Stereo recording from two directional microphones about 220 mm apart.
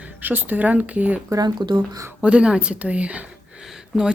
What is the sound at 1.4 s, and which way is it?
Speech, 20° right (ahead or behind).